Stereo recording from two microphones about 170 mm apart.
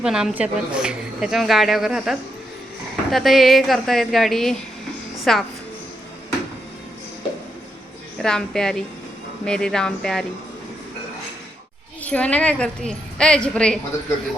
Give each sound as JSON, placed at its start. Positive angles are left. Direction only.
{"t": 0.0, "sound": "a woman's voice", "side_deg": -5}
{"t": 8.2, "sound": "a woman's voice", "side_deg": 5}
{"t": 12.0, "sound": "a woman's voice", "side_deg": 5}